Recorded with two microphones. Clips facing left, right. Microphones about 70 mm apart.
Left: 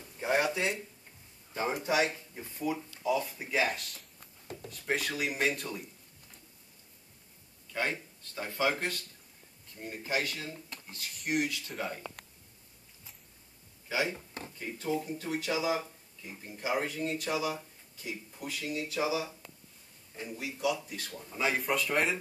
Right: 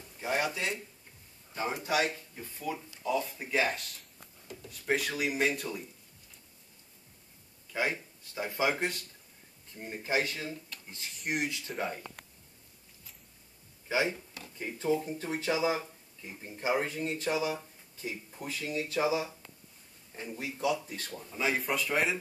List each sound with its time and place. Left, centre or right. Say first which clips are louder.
0.2 s a sound: left 2 dB; left
1.5 s a man's voice: left 1 dB; left
2.7 s speech: left 2 dB; centre
7.7 s speech: right 1 dB; centre; by 10.5 s right
11.1 s speech: left 3 dB; centre
11.4 s speech: even; right
11.7 s speech: right 2 dB; centre
13.8 s speech: right 2 dB; right
21.3 s speech: left 1 dB; centre